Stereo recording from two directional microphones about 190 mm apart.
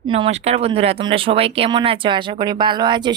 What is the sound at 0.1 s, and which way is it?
Speech, 30° right (ahead or behind).